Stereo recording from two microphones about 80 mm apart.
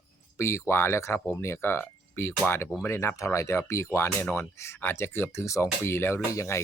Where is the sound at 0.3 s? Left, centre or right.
Left.